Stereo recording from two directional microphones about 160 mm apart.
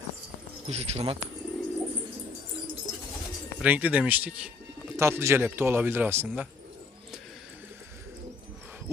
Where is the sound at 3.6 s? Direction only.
10° right (ahead or behind).